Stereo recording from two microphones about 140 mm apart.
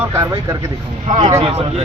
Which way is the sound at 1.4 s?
45° right (ahead or behind).